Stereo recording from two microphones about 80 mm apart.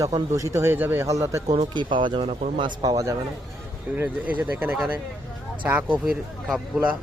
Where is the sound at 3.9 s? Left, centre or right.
Right.